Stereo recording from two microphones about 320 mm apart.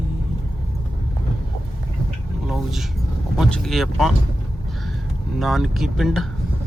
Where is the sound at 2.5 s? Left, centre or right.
Centre.